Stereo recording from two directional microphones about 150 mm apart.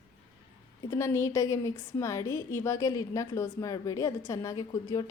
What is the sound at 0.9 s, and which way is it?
A woman's voice, 20° left (ahead or behind).